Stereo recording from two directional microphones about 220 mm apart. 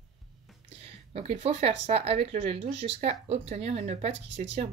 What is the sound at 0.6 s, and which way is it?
Speech, 25° right (ahead or behind).